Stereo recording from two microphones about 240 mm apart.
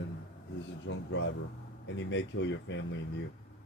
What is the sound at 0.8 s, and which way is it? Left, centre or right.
Speech, left.